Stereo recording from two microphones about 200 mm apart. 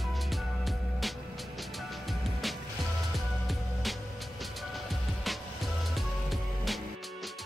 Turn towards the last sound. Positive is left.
turn(degrees=0)  # may be behind; listen again after turning